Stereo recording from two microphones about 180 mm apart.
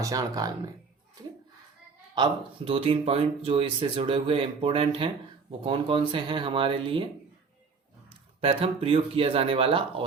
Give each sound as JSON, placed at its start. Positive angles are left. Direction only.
{"t": 0.0, "sound": "speech", "side_deg": -20}
{"t": 2.1, "sound": "speech", "side_deg": -25}
{"t": 8.4, "sound": "speech", "side_deg": -30}